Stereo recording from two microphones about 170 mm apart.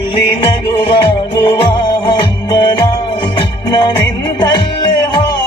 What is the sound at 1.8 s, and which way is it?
Music, 25° left (ahead or behind).